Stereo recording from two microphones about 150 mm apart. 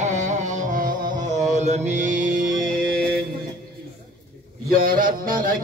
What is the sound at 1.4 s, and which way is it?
Mantra, 50° right (ahead or behind).